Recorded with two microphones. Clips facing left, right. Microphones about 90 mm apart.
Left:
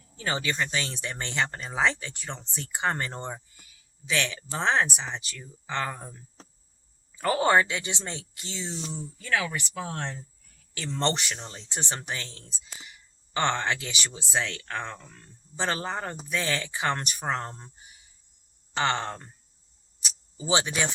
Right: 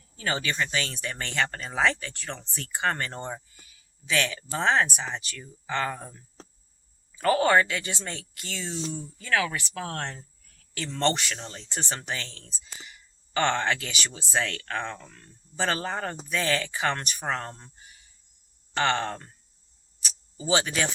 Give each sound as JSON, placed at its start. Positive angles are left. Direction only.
{"t": 0.2, "sound": "speech", "side_deg": 20}
{"t": 7.2, "sound": "speech", "side_deg": 20}
{"t": 9.8, "sound": "speech", "side_deg": 5}
{"t": 10.9, "sound": "speech", "side_deg": 20}
{"t": 20.3, "sound": "speech", "side_deg": 20}